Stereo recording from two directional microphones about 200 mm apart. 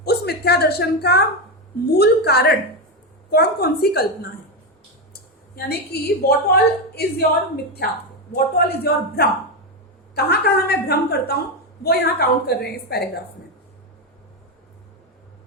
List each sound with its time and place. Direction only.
0.0 s a woman's voice: 55° left (ahead or behind)
5.5 s a woman's voice: 55° left (ahead or behind)